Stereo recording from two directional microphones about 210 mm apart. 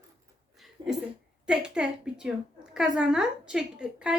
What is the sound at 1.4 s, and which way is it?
A woman's voice, 5° right (ahead or behind).